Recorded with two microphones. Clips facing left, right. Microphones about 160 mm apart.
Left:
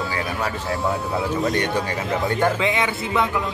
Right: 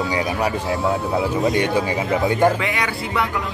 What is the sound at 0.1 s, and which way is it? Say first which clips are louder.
Music: right 4 dB; 20° right (ahead or behind).